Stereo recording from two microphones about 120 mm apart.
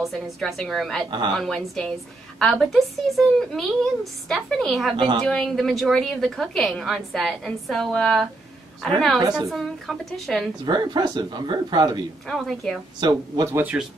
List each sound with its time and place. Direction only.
0.0 s a woman's voice: centre (ahead or behind)
4.9 s a woman's voice: 40° right (ahead or behind)
5.2 s a woman's voice: 5° left (ahead or behind)
10.6 s speech: 40° right (ahead or behind)
12.3 s a woman's voice: centre (ahead or behind)
13.0 s speech: 35° right (ahead or behind)
13.6 s speech: 10° right (ahead or behind)